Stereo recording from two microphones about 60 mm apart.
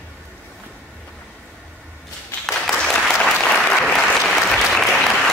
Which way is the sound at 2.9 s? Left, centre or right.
Centre.